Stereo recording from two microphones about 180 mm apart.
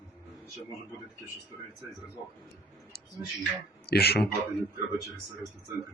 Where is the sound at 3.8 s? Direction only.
60° left (ahead or behind).